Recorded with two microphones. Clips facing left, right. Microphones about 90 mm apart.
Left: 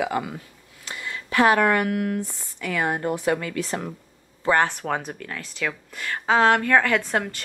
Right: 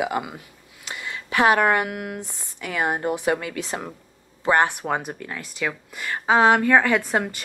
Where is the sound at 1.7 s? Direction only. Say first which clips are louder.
Left 3 dB; 15° right (ahead or behind).